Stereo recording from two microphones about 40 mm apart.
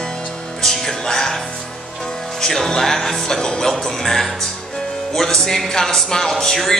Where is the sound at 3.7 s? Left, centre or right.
Centre.